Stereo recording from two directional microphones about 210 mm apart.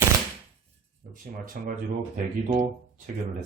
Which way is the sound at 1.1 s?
40° right (ahead or behind).